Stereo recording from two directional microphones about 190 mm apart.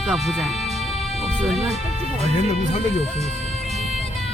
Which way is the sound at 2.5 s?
35° left (ahead or behind).